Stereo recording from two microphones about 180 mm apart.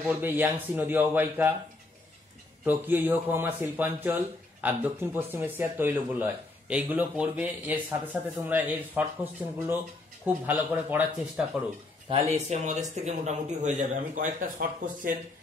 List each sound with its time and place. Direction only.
0.0 s speech: 10° right (ahead or behind)
2.6 s speech: 10° right (ahead or behind)
12.1 s a man's voice: 35° right (ahead or behind)